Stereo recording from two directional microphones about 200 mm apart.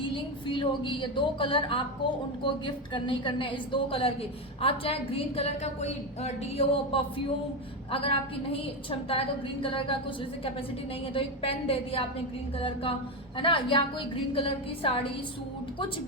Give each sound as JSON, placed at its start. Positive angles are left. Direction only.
{"t": 0.0, "sound": "a woman's voice", "side_deg": 25}
{"t": 11.1, "sound": "a woman's voice", "side_deg": 30}